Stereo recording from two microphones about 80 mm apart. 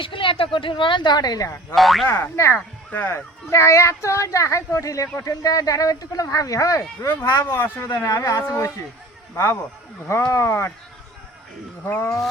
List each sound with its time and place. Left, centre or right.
0.0 s a woman's voice: left
1.7 s speech: centre
2.0 s speech: left